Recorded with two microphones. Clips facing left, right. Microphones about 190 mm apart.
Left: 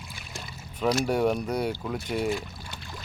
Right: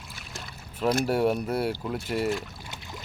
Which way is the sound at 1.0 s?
5° right (ahead or behind).